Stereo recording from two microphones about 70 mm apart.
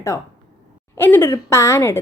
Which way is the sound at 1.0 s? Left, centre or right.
Left.